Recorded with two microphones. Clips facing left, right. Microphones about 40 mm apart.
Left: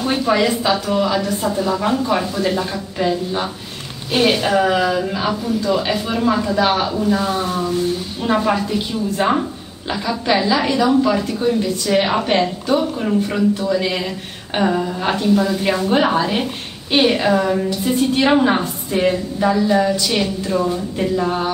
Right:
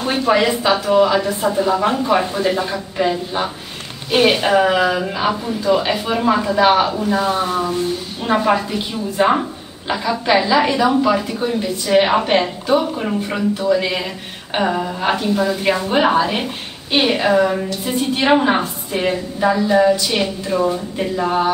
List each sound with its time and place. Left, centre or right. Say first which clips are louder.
0.0 s a woman's voice: right 1 dB; centre